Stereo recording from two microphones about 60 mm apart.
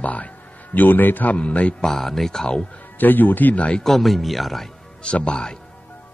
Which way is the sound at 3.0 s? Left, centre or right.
Left.